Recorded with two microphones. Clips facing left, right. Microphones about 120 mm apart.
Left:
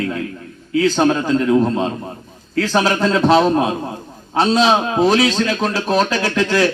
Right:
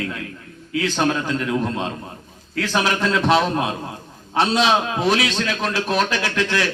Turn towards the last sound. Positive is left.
turn(degrees=40)  # may be behind; listen again after turning